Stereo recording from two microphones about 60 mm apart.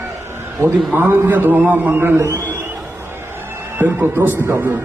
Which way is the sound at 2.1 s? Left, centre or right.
Right.